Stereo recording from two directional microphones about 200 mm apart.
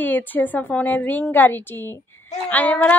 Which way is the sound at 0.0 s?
10° left (ahead or behind).